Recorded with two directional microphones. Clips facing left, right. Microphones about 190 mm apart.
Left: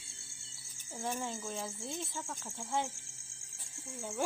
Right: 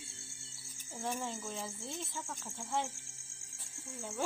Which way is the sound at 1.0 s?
Centre (ahead or behind).